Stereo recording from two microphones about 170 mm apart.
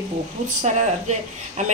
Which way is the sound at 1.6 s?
45° right (ahead or behind).